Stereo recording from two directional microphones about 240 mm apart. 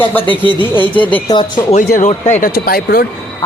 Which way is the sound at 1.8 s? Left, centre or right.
Left.